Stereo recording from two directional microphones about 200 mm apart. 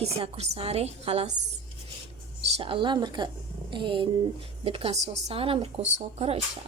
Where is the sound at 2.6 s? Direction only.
25° right (ahead or behind).